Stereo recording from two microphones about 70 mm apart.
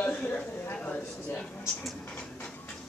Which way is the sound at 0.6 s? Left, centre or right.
Left.